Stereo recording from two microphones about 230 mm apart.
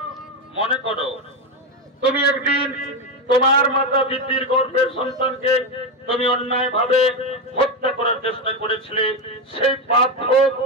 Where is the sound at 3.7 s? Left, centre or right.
Left.